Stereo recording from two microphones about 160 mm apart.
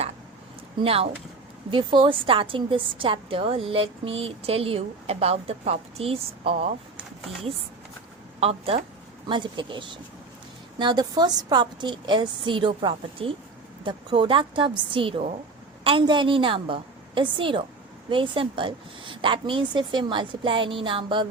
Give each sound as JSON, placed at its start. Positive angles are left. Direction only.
{"t": 0.8, "sound": "a woman's voice", "side_deg": -35}
{"t": 8.4, "sound": "a woman's voice", "side_deg": -40}